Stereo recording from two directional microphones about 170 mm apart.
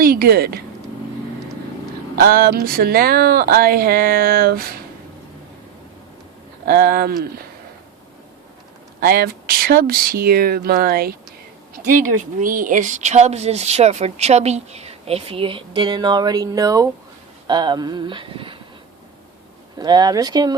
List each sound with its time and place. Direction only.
0.0 s speech: 60° right (ahead or behind)
2.1 s speech: 60° right (ahead or behind)
6.7 s speech: 60° right (ahead or behind)
9.0 s speech: 60° right (ahead or behind); by 18.5 s 30° right (ahead or behind)
19.8 s speech: 25° right (ahead or behind)